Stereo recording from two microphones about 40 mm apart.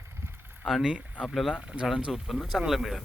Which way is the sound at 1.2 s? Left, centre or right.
Centre.